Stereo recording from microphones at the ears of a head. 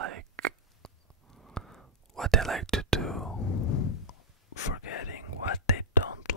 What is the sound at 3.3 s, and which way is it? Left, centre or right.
Whispering, left.